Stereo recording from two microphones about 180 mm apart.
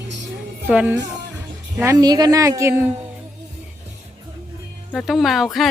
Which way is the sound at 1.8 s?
20° right (ahead or behind).